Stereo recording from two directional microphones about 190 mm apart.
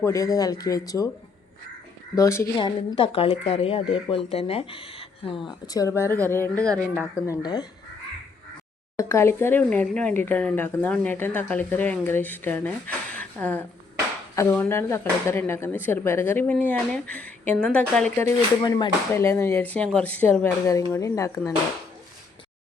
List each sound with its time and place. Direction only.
0.0 s speech: 15° left (ahead or behind)
2.1 s speech: 15° left (ahead or behind)
2.6 s speech: 25° left (ahead or behind)
9.0 s speech: 15° left (ahead or behind)
13.1 s a sound: 10° left (ahead or behind)
14.3 s speech: 10° left (ahead or behind)